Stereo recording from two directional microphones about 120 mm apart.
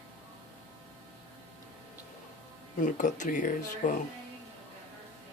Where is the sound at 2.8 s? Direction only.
90° left.